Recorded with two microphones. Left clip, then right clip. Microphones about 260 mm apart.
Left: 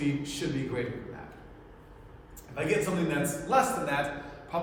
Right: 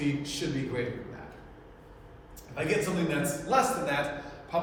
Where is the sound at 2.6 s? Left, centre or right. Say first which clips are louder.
Even; centre.